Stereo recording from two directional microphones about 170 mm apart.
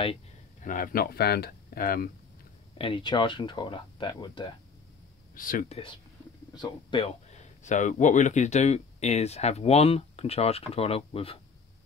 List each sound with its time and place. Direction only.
0.6 s speech: 50° left (ahead or behind)
2.8 s speech: 30° left (ahead or behind)
5.3 s speech: 55° left (ahead or behind)
5.7 s speech: 30° left (ahead or behind)